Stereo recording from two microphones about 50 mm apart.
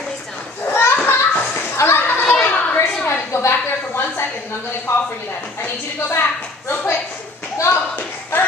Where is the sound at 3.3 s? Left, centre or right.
Left.